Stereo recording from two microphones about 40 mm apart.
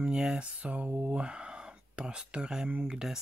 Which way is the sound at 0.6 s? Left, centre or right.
Right.